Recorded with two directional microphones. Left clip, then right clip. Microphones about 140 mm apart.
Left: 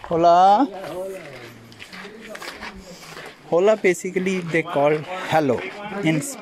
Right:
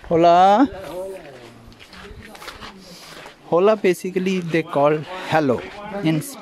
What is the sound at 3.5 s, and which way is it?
Speech, 35° right (ahead or behind).